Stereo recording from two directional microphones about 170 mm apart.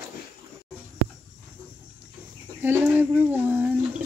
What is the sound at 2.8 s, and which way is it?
Speech, 10° right (ahead or behind).